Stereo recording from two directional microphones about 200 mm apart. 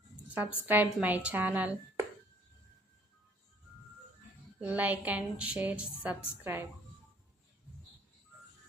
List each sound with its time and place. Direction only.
0.3 s a woman's voice: 10° right (ahead or behind)
4.6 s a woman's voice: 10° right (ahead or behind)